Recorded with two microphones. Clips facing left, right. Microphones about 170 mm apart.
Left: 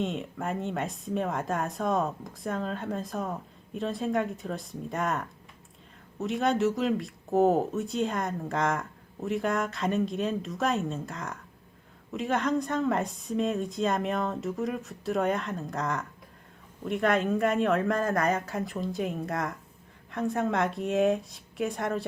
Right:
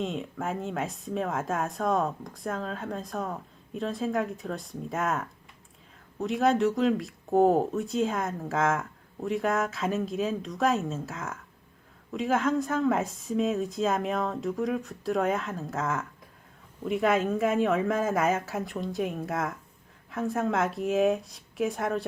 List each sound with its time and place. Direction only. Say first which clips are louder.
0.0 s speech: even; centre (ahead or behind)